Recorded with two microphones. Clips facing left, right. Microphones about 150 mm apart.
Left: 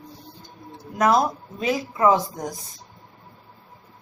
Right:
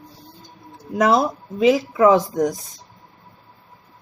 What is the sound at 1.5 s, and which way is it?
Speech, 90° right.